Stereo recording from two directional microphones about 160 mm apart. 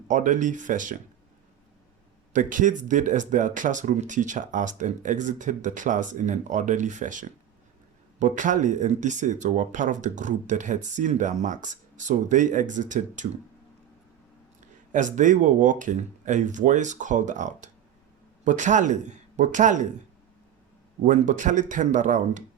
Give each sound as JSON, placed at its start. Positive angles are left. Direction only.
{"t": 0.1, "sound": "speech", "side_deg": -50}
{"t": 2.3, "sound": "speech", "side_deg": -55}
{"t": 14.9, "sound": "speech", "side_deg": -50}
{"t": 21.0, "sound": "speech", "side_deg": -50}